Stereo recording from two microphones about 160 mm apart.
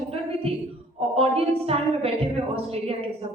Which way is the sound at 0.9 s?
40° right (ahead or behind).